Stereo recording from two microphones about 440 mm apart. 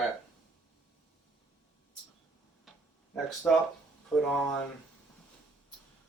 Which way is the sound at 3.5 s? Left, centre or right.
Centre.